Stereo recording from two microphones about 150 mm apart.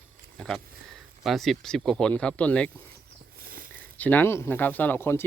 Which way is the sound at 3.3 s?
75° right (ahead or behind).